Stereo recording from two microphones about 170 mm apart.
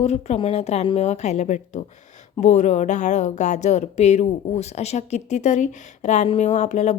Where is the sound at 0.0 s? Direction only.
40° left (ahead or behind).